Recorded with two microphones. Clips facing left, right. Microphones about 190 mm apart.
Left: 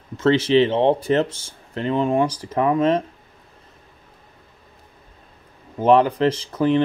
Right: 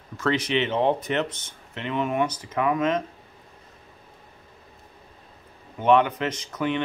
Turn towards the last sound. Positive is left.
turn(degrees=35)  # may be behind; listen again after turning